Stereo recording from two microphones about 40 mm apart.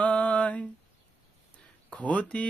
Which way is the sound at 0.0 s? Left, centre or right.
Left.